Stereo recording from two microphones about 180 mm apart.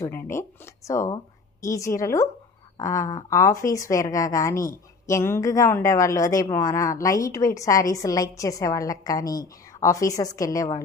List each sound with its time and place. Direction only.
0.0 s a woman's voice: 15° left (ahead or behind)